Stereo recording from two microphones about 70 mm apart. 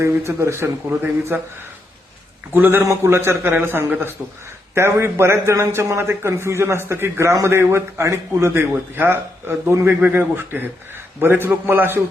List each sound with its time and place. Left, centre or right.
0.0 s a man's voice: right
2.6 s a man's voice: right
2.8 s a man's voice: right